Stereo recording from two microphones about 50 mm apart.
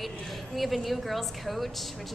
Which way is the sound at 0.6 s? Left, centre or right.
Centre.